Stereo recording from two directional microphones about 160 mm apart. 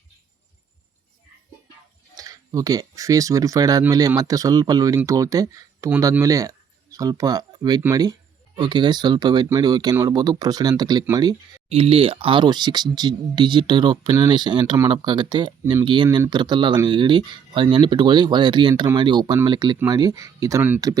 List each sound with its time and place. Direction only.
2.1 s speech: 20° right (ahead or behind)
11.7 s speech: 35° right (ahead or behind); by 20.8 s 10° right (ahead or behind)